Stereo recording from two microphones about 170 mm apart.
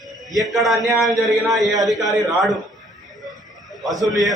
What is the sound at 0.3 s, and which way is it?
A man's voice, centre (ahead or behind).